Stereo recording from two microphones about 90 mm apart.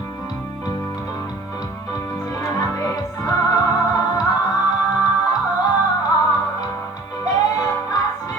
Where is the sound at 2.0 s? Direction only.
35° left (ahead or behind).